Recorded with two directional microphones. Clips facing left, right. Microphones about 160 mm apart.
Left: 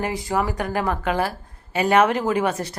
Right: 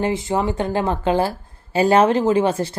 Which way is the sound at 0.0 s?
25° right (ahead or behind).